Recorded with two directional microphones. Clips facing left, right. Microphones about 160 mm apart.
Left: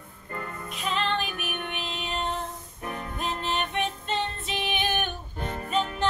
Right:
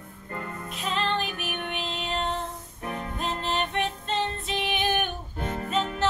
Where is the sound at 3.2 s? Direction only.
Centre (ahead or behind).